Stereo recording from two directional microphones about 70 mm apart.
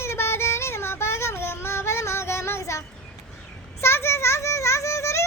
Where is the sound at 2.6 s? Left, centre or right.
Left.